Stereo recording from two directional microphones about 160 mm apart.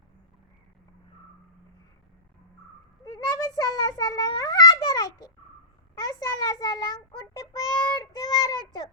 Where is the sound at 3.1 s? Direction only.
25° left (ahead or behind).